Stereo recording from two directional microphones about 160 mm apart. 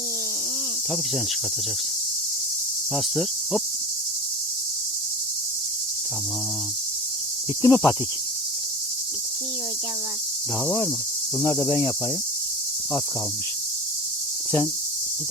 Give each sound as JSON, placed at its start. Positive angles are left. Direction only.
{"t": 2.9, "sound": "cricket", "side_deg": 0}
{"t": 7.6, "sound": "cricket", "side_deg": 25}
{"t": 11.3, "sound": "cricket", "side_deg": 25}